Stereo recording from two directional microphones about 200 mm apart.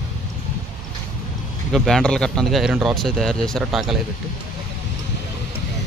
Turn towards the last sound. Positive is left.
turn(degrees=0)  # may be behind; listen again after turning